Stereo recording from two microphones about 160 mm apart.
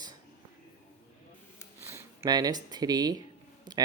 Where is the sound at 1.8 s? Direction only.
20° right (ahead or behind).